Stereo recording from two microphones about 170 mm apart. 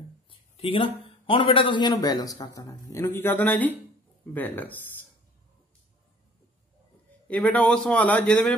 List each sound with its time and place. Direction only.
0.3 s a man's voice: 30° left (ahead or behind); by 4.9 s 10° left (ahead or behind)
7.2 s a man's voice: 10° left (ahead or behind)